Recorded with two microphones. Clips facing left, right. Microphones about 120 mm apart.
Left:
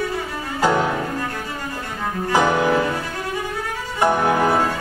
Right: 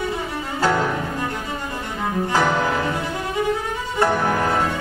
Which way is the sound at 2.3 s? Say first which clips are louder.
Left 3 dB; 15° left (ahead or behind).